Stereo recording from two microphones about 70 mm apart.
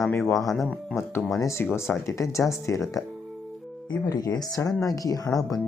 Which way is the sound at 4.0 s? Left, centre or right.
Left.